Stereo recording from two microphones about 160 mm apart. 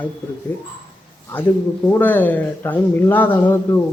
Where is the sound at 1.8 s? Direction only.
10° left (ahead or behind).